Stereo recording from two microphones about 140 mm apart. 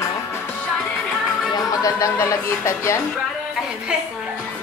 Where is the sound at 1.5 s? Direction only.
25° left (ahead or behind).